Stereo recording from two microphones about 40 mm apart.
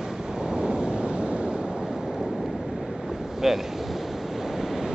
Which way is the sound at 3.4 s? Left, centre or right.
Centre.